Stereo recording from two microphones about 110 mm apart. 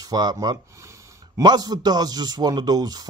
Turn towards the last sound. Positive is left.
turn(degrees=-35)  # may be behind; listen again after turning